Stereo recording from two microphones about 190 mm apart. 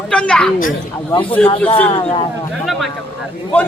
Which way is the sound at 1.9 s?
25° left (ahead or behind).